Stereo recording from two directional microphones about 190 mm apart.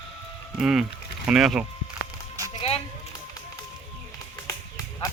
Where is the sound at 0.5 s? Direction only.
5° right (ahead or behind).